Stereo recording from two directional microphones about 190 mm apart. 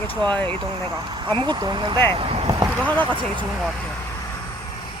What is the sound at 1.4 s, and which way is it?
Speech, 20° right (ahead or behind).